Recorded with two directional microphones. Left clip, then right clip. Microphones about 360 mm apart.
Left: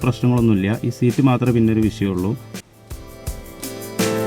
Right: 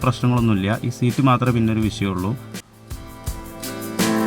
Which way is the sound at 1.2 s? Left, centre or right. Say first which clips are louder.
Right 1 dB; right.